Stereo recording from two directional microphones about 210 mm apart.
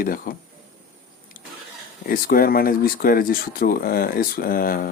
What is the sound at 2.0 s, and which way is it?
Speech, 45° left (ahead or behind).